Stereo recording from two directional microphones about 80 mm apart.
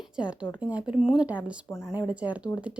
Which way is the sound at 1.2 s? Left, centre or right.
Centre.